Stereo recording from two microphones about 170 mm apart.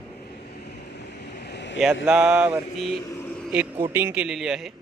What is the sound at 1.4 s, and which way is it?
Vehicle, 85° left.